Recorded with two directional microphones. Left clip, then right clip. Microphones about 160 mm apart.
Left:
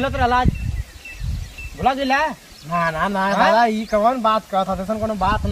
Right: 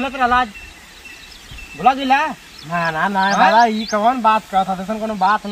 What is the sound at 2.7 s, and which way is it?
Speech, 35° left (ahead or behind).